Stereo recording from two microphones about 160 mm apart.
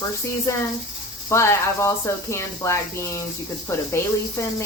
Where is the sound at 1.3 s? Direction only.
15° left (ahead or behind).